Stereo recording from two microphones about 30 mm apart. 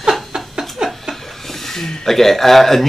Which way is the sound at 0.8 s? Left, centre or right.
Right.